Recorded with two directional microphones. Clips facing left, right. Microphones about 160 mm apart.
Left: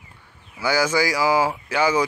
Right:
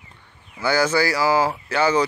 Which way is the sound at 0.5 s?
10° left (ahead or behind).